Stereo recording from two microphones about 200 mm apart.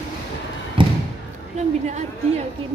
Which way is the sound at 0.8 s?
25° right (ahead or behind).